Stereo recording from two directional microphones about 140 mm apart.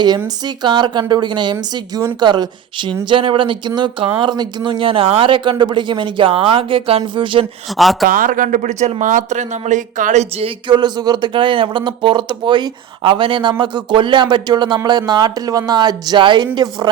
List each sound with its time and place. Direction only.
0.4 s speech: 30° right (ahead or behind)
7.7 s speech: centre (ahead or behind)
8.0 s speech: 75° right (ahead or behind); by 10.5 s 55° right (ahead or behind)
10.7 s speech: 30° right (ahead or behind)